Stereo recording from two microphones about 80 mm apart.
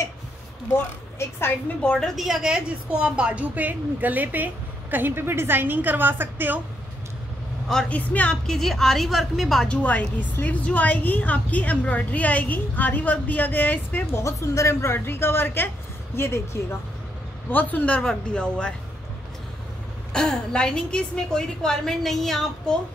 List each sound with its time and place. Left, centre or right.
2.1 s a woman's voice: centre; by 6.6 s right
7.9 s a woman's voice: centre
8.5 s a woman's voice: centre
9.7 s a woman's voice: centre
14.1 s a woman's voice: left
17.5 s a woman's voice: left
20.1 s a woman's voice: centre